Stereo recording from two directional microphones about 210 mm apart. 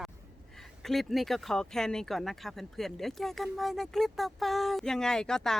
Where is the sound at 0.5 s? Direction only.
Centre (ahead or behind).